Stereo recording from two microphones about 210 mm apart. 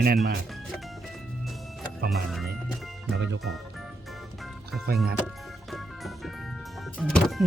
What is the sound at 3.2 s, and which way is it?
Speech, 60° right (ahead or behind).